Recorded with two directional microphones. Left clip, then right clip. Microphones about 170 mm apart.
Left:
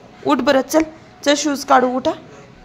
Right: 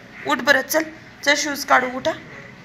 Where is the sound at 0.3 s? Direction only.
60° left (ahead or behind).